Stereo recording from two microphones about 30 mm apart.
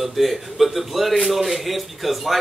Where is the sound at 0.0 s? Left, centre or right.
Centre.